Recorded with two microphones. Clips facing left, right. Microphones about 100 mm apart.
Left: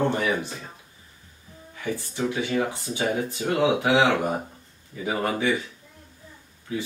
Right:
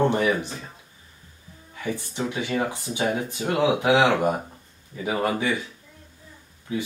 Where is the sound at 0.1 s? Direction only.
20° right (ahead or behind).